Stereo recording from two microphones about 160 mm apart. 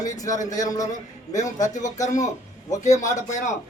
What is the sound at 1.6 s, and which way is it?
Speech, 50° left (ahead or behind).